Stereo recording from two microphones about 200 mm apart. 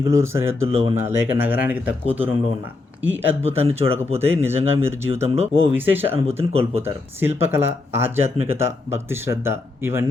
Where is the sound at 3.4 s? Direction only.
30° right (ahead or behind).